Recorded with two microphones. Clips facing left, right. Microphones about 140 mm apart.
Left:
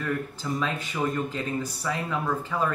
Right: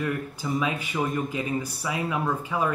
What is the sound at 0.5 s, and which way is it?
Speech, 10° right (ahead or behind).